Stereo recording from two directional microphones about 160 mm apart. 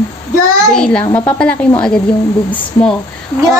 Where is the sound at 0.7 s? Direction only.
5° left (ahead or behind).